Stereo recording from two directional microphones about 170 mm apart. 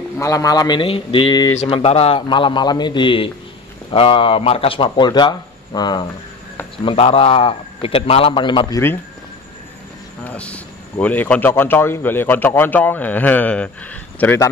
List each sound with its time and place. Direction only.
0.2 s speech: 20° left (ahead or behind)
1.6 s a man's voice: 35° left (ahead or behind)
10.2 s a man's voice: 5° left (ahead or behind)